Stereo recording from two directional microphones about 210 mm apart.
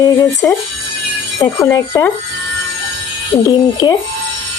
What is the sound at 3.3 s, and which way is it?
Speech, 20° left (ahead or behind).